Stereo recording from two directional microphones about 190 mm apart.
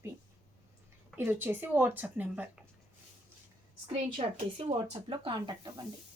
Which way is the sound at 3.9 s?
35° right (ahead or behind).